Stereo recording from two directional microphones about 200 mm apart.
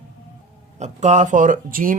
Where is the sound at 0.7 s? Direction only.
35° right (ahead or behind).